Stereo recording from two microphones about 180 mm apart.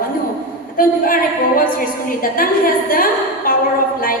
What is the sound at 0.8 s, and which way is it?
A woman's voice, 50° left (ahead or behind).